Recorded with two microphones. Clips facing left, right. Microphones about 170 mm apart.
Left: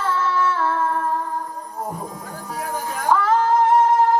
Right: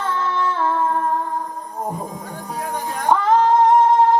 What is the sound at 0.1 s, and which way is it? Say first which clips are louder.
Music: left 2 dB; 20° right (ahead or behind).